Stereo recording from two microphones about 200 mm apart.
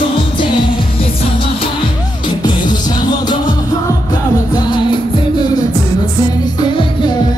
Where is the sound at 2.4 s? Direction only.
20° left (ahead or behind).